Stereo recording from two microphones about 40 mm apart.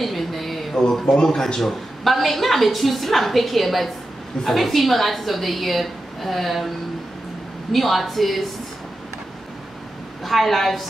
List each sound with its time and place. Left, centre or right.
0.0 s a sound: centre
0.8 s a woman's voice: centre
1.1 s speech: centre
1.6 s a woman's voice: centre
7.7 s a woman's voice: centre
10.2 s a woman's voice: centre